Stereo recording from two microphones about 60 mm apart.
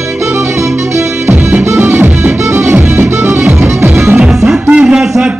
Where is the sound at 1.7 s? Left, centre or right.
Right.